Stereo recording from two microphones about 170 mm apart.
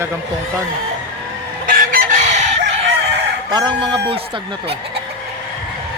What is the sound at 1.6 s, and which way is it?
Chicken, 55° right (ahead or behind).